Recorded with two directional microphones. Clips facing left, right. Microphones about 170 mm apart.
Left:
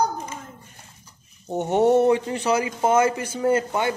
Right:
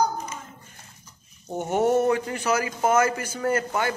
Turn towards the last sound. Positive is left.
turn(degrees=20)  # may be behind; listen again after turning